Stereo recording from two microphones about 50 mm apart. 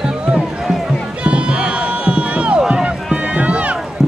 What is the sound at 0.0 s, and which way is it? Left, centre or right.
Music, centre.